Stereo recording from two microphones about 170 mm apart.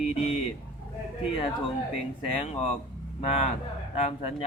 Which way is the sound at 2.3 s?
35° left (ahead or behind).